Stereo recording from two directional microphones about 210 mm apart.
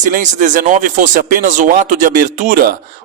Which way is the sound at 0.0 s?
35° right (ahead or behind).